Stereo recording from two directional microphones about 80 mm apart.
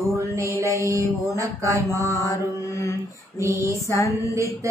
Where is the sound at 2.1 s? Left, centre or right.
Left.